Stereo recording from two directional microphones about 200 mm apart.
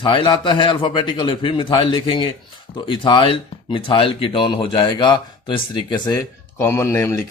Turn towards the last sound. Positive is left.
turn(degrees=15)  # may be behind; listen again after turning